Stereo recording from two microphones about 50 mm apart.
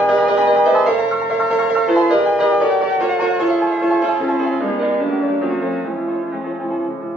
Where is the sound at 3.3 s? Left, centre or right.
Centre.